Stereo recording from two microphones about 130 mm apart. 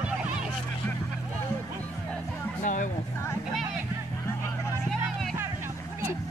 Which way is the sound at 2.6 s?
75° left (ahead or behind).